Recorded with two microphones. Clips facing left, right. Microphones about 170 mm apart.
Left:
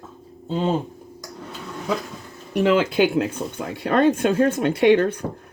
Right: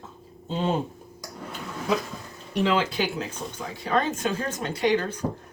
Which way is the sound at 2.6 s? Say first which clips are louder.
Left 7 dB; 50° left (ahead or behind).